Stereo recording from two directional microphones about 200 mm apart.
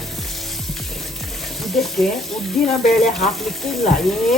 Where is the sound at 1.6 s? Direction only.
Centre (ahead or behind).